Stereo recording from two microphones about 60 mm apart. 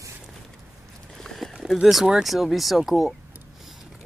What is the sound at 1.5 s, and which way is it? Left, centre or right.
Speech, centre.